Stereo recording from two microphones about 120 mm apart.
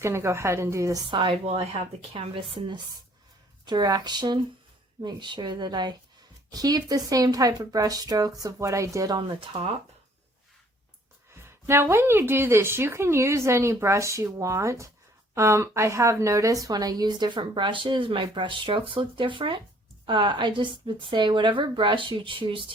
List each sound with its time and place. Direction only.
0.0 s speech: 20° right (ahead or behind)
1.1 s a woman's voice: 45° right (ahead or behind); by 9.1 s 25° right (ahead or behind)
9.1 s a woman's voice: 45° right (ahead or behind)
11.3 s a woman's voice: 20° right (ahead or behind); by 22.6 s 45° right (ahead or behind)